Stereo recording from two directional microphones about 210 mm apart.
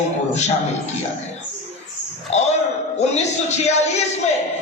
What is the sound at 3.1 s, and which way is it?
Speech, 30° left (ahead or behind).